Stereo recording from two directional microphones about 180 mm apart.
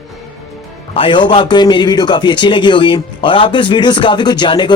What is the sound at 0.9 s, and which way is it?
A man's voice, 25° left (ahead or behind).